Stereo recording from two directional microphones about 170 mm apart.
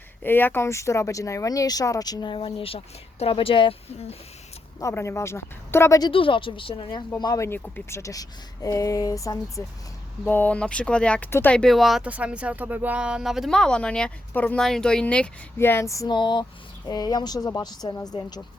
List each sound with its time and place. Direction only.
0.2 s speech: 10° left (ahead or behind); by 4.2 s 35° left (ahead or behind)
4.8 s speech: 15° left (ahead or behind)
6.1 s a woman's voice: 30° left (ahead or behind)